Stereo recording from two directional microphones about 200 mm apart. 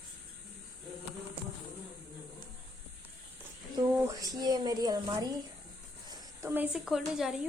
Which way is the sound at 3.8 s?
15° right (ahead or behind).